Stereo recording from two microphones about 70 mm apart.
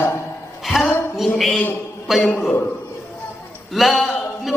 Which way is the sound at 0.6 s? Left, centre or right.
Centre.